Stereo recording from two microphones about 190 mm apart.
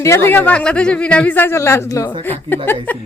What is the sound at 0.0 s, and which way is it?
Speech, 15° left (ahead or behind).